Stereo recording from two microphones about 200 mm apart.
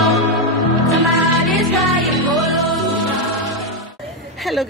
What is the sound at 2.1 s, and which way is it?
Music, centre (ahead or behind).